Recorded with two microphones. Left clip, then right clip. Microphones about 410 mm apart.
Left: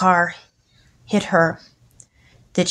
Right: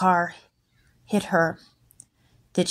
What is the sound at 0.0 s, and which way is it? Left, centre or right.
A woman's voice, right.